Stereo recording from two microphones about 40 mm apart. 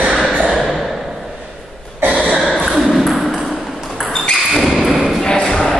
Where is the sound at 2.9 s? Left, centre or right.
Centre.